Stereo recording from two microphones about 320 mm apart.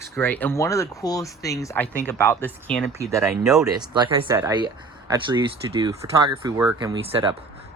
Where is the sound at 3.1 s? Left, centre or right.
Centre.